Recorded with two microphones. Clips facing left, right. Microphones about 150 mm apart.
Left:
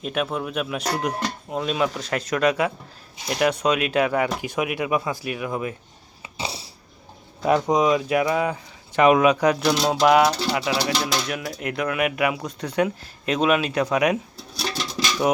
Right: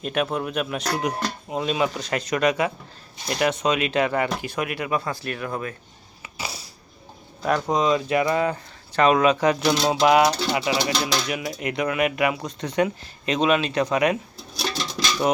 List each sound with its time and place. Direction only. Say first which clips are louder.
0.0 s speech: right 1 dB; centre (ahead or behind)
6.2 s a sound: left 3 dB; 25° left (ahead or behind)
7.4 s speech: left 3 dB; 15° left (ahead or behind)
9.5 s speech: even; centre (ahead or behind)
11.3 s speech: right 1 dB; 5° right (ahead or behind)
15.2 s speech: left 1 dB; centre (ahead or behind)